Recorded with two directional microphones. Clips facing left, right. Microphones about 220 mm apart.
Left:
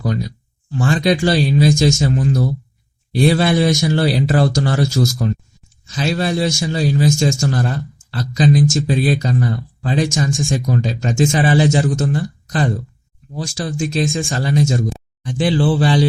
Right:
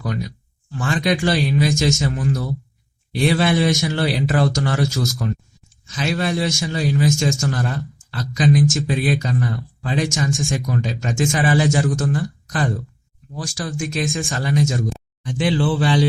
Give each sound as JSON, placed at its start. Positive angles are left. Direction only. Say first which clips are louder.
{"t": 0.7, "sound": "speech", "louder": "left 4 dB", "side_deg": 30}